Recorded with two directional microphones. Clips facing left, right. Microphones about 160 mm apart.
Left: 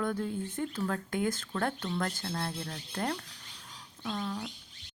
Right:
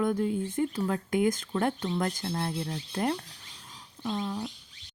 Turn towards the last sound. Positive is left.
turn(degrees=-15)  # may be behind; listen again after turning